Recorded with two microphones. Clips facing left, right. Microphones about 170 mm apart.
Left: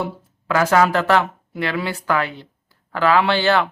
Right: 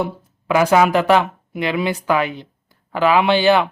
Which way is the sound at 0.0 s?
15° right (ahead or behind).